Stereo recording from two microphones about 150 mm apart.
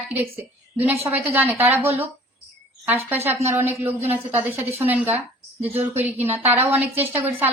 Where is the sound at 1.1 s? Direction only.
10° right (ahead or behind).